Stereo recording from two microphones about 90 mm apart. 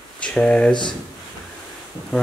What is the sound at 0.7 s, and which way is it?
Speech, 60° left (ahead or behind).